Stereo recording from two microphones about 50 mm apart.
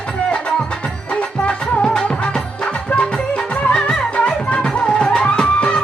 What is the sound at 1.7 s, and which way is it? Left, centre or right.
Music, left.